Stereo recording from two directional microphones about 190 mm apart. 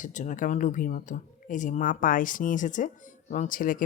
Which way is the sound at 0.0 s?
40° left (ahead or behind).